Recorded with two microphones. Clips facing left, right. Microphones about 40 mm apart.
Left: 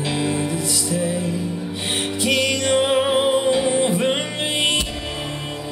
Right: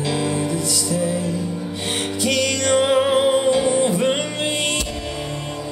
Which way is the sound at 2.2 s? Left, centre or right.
Left.